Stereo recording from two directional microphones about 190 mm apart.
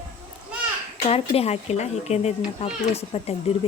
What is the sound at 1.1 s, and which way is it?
A child's voice, 30° left (ahead or behind).